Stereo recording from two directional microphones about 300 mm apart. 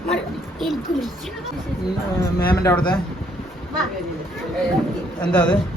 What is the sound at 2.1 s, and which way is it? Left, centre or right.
Speech, centre.